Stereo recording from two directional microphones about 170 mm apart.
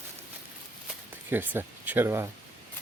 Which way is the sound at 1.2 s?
10° right (ahead or behind).